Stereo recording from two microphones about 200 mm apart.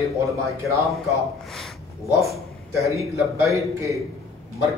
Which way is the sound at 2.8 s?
15° right (ahead or behind).